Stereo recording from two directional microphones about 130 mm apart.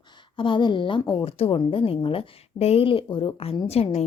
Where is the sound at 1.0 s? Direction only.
30° left (ahead or behind).